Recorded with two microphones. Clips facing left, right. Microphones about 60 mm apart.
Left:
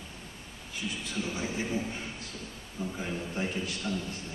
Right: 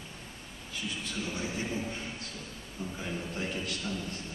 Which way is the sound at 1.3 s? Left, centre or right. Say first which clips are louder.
Left 2 dB; centre.